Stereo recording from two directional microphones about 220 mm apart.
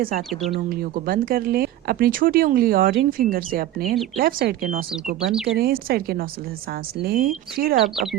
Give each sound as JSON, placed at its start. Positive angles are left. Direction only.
{"t": 0.0, "sound": "speech", "side_deg": -40}
{"t": 5.3, "sound": "speech", "side_deg": 0}
{"t": 5.5, "sound": "speech", "side_deg": -45}